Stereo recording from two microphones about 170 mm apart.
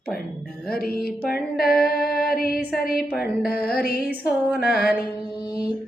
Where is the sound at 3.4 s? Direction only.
65° left (ahead or behind).